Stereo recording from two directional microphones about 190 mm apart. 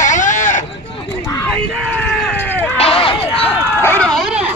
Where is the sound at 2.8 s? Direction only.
30° left (ahead or behind).